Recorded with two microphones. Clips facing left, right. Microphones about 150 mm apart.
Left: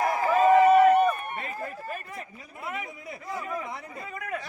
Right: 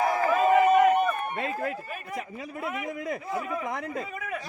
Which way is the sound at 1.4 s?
90° right.